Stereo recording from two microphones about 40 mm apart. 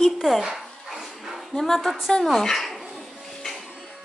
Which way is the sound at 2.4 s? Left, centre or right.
Centre.